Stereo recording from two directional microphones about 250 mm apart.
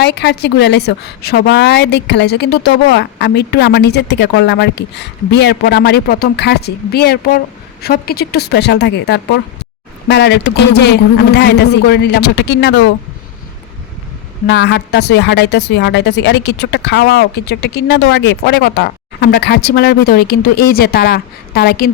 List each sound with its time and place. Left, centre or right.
0.0 s a woman's voice: left
14.4 s a woman's voice: left